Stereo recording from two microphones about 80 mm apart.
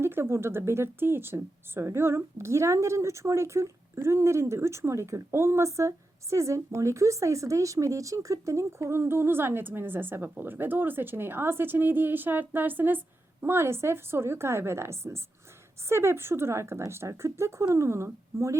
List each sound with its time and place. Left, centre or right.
0.0 s speech: right